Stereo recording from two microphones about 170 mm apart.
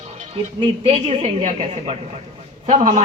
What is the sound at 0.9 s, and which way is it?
A man's voice, 40° right (ahead or behind).